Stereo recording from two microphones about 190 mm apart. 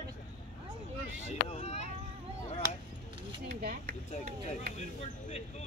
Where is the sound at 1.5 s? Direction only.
35° left (ahead or behind).